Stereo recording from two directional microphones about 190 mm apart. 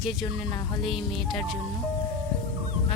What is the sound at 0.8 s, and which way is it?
Speech, centre (ahead or behind).